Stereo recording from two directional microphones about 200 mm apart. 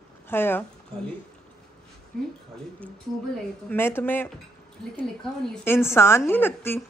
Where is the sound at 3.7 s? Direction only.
10° left (ahead or behind).